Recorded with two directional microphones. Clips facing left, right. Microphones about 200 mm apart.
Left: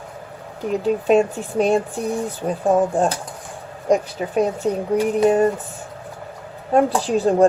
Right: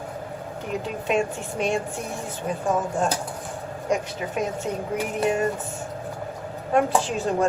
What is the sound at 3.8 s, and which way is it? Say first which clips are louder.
Speech: left 7 dB; 35° left (ahead or behind).